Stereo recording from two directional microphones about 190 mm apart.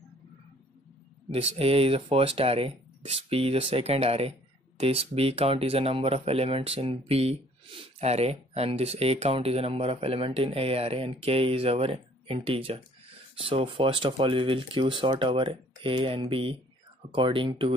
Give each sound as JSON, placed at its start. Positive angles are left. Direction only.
{"t": 1.3, "sound": "speech", "side_deg": -30}